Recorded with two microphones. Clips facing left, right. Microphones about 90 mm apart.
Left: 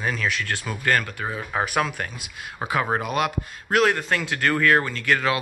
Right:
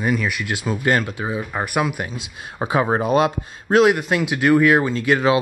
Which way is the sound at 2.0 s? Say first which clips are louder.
Right 4 dB; 25° right (ahead or behind).